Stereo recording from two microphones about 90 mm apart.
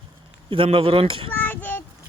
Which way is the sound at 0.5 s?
85° right.